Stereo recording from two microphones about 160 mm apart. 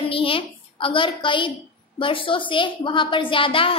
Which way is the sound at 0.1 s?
35° left (ahead or behind).